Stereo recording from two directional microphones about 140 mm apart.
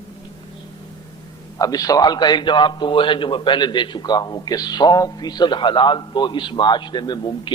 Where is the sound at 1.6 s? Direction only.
25° left (ahead or behind).